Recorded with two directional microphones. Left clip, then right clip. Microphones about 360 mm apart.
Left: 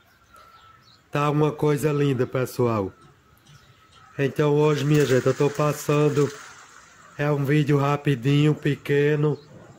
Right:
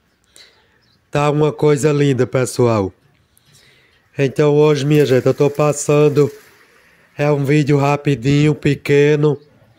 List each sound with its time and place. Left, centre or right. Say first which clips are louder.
1.1 s mantra: right 7 dB; centre
4.2 s mantra: right 8 dB; centre